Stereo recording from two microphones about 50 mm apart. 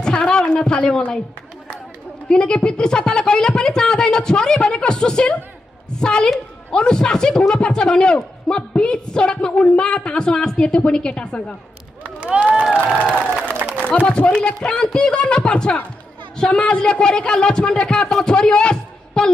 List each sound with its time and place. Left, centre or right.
0.0 s a woman's voice: centre
2.2 s a man's voice: centre
12.0 s run: right
13.0 s a woman's voice: left